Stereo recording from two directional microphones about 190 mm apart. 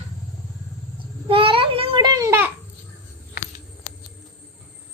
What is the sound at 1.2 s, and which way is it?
Babbling, 30° right (ahead or behind).